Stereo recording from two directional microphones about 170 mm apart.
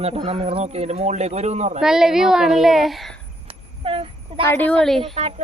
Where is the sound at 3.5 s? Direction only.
30° right (ahead or behind).